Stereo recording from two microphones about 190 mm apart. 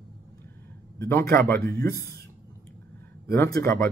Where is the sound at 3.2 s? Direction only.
15° left (ahead or behind).